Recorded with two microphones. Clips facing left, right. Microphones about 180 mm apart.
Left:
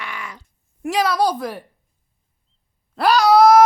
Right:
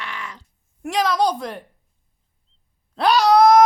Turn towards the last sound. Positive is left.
turn(degrees=5)  # may be behind; listen again after turning